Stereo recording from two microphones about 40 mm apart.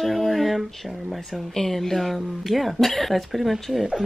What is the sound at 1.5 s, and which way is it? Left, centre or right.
Speech, centre.